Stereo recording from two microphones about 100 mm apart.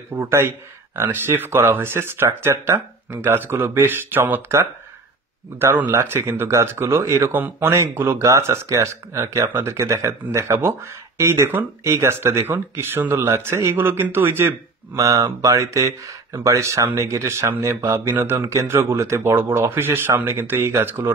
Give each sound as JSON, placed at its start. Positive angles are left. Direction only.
{"t": 0.1, "sound": "speech", "side_deg": -25}
{"t": 15.0, "sound": "speech", "side_deg": -35}